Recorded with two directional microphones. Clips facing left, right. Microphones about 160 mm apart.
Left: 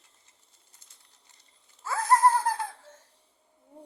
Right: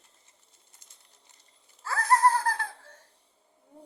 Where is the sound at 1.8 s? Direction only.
25° left (ahead or behind).